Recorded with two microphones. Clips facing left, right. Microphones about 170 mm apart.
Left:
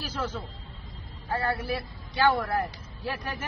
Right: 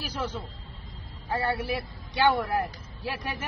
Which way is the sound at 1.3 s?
10° right (ahead or behind).